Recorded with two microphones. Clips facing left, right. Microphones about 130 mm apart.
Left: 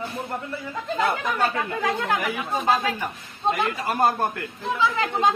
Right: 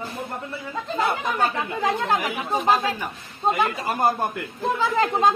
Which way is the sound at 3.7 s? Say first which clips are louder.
Even; 20° right (ahead or behind).